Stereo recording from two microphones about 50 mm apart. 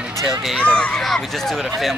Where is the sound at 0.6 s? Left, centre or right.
Left.